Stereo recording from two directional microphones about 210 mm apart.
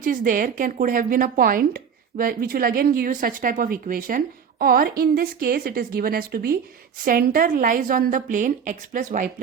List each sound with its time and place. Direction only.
0.0 s a woman's voice: 40° right (ahead or behind)